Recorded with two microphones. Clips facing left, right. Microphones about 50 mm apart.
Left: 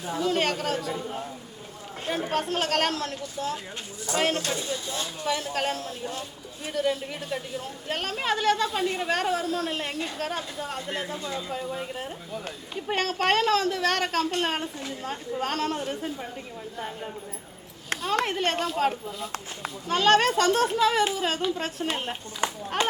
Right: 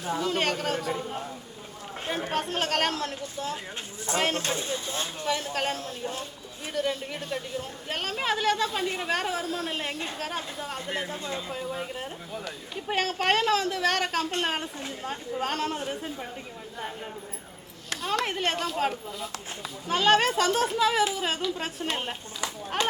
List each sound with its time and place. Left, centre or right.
0.2 s a woman's voice: centre
2.3 s a woman's voice: centre
4.4 s speech: right
5.2 s a woman's voice: centre
18.3 s a woman's voice: centre
22.4 s speech: left